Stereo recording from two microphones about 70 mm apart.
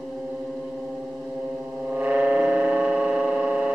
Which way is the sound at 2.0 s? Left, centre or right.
Centre.